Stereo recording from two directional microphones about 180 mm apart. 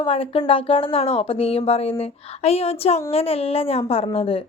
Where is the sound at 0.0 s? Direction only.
30° left (ahead or behind).